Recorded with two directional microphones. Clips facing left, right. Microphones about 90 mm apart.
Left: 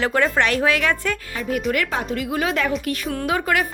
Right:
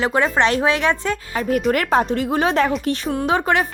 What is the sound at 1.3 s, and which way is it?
Speech, 45° right (ahead or behind).